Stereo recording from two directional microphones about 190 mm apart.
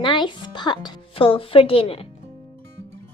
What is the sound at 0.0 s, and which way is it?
Speech, 25° left (ahead or behind).